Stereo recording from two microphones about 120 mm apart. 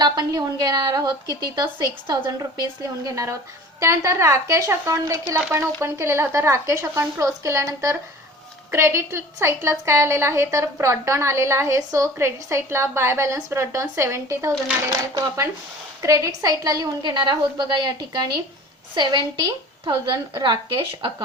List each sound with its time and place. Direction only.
0.0 s a woman's voice: 35° right (ahead or behind)